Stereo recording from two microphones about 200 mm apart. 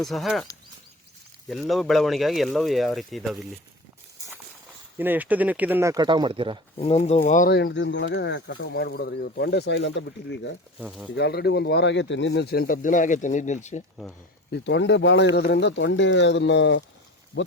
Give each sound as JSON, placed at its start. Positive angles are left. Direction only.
{"t": 0.0, "sound": "speech", "side_deg": 0}
{"t": 1.5, "sound": "speech", "side_deg": 0}
{"t": 4.9, "sound": "speech", "side_deg": -10}
{"t": 6.7, "sound": "speech", "side_deg": 30}
{"t": 7.2, "sound": "speech", "side_deg": 45}
{"t": 7.5, "sound": "speech", "side_deg": 60}
{"t": 10.8, "sound": "speech", "side_deg": -5}
{"t": 11.1, "sound": "speech", "side_deg": 55}
{"t": 14.5, "sound": "speech", "side_deg": 60}